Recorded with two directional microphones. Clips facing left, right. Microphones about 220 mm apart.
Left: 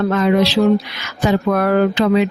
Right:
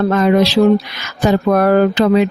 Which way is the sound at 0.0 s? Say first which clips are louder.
Right 2 dB; 45° right (ahead or behind).